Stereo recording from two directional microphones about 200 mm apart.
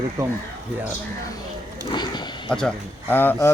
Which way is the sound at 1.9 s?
20° left (ahead or behind).